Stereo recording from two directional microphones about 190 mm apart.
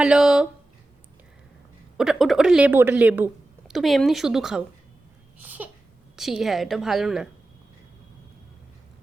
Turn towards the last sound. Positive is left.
turn(degrees=0)  # may be behind; listen again after turning